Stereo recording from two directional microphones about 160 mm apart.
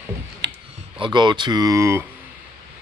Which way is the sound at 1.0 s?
30° right (ahead or behind).